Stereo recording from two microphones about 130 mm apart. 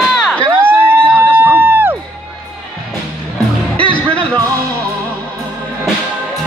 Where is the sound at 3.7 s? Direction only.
10° left (ahead or behind).